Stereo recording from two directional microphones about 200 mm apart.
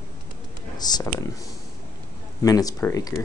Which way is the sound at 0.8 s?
20° left (ahead or behind).